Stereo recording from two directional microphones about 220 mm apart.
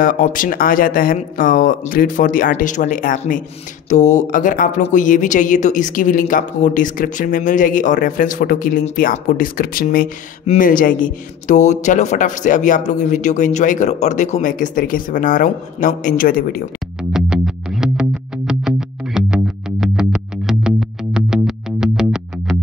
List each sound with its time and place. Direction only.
0.0 s speech: 40° left (ahead or behind)
17.1 s music: 5° right (ahead or behind)